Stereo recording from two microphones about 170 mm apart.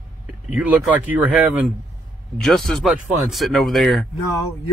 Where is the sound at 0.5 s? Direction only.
10° right (ahead or behind).